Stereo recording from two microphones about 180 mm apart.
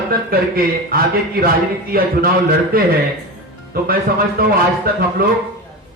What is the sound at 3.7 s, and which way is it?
Speech, 55° right (ahead or behind).